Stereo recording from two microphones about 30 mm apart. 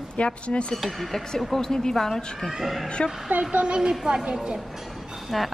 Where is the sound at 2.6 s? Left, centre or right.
Centre.